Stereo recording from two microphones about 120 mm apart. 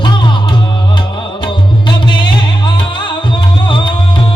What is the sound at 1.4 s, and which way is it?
Music, 40° left (ahead or behind).